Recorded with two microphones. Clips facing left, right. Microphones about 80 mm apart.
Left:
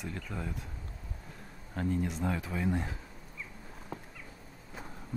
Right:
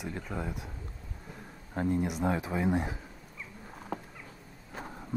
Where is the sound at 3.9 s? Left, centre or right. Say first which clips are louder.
Right 6 dB; right.